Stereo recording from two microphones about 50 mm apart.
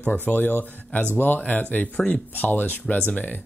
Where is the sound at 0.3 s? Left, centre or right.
Left.